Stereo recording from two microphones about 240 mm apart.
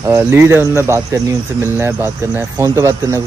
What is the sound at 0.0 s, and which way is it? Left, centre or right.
Speech, centre.